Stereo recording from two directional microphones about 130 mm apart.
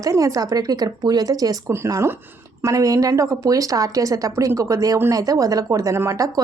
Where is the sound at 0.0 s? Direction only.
25° right (ahead or behind).